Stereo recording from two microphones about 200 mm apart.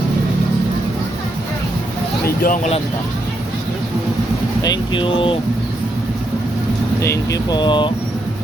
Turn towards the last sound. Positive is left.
turn(degrees=25)  # may be behind; listen again after turning